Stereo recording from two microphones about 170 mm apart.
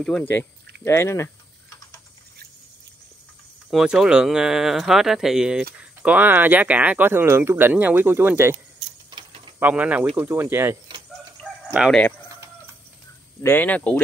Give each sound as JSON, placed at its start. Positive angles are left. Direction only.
{"t": 0.0, "sound": "speech", "side_deg": 5}
{"t": 3.7, "sound": "speech", "side_deg": -5}
{"t": 9.1, "sound": "mechanisms", "side_deg": -30}
{"t": 9.6, "sound": "speech", "side_deg": -10}
{"t": 11.7, "sound": "speech", "side_deg": -5}
{"t": 13.4, "sound": "speech", "side_deg": 10}